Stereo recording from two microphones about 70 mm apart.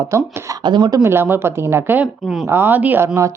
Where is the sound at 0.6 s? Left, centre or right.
Right.